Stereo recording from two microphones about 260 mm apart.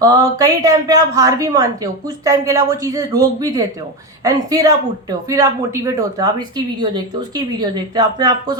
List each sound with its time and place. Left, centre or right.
0.0 s a woman's voice: centre